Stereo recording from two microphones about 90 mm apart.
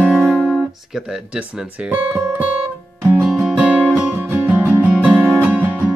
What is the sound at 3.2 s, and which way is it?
Music, 10° right (ahead or behind).